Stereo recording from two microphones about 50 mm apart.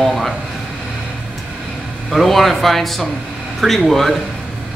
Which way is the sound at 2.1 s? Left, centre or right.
Centre.